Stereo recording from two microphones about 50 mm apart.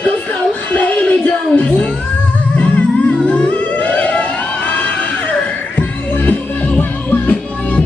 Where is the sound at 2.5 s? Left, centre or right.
Left.